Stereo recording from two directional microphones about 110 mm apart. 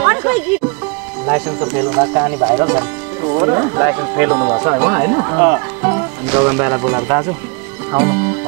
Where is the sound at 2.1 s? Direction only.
35° right (ahead or behind).